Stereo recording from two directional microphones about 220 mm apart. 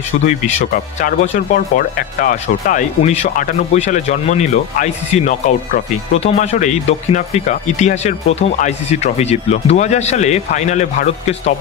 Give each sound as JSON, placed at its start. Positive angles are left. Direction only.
{"t": 1.0, "sound": "speech", "side_deg": 35}